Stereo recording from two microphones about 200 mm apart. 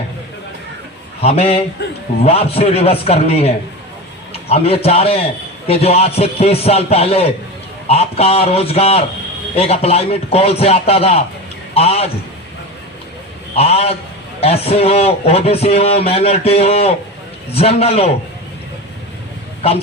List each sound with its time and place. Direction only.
1.2 s a man's voice: 30° left (ahead or behind)
13.6 s a man's voice: 30° left (ahead or behind)